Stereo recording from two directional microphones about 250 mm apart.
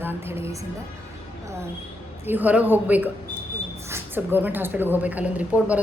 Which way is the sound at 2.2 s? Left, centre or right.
Centre.